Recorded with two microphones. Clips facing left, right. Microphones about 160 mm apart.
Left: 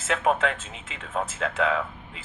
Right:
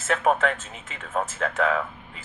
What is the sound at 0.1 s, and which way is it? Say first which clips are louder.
Speech: right 2 dB; 40° right (ahead or behind).